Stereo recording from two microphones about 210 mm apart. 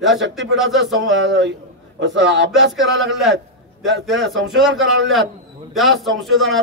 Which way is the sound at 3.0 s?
Centre (ahead or behind).